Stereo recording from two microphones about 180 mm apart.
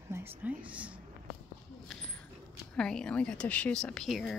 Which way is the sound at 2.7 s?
5° left (ahead or behind).